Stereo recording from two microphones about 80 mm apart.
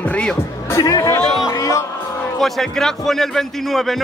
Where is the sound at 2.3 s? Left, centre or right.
Centre.